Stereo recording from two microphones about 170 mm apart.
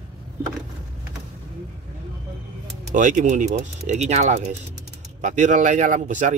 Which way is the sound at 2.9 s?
50° right (ahead or behind).